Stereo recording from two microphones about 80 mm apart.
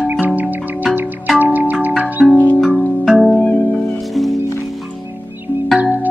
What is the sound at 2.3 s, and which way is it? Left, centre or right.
Music, left.